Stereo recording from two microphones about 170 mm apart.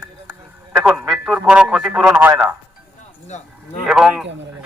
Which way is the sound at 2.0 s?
15° right (ahead or behind).